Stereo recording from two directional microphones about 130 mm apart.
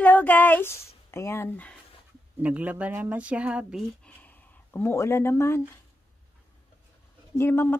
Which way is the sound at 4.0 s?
10° left (ahead or behind).